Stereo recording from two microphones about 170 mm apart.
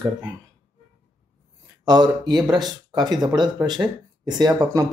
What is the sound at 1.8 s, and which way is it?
Speech, 25° right (ahead or behind).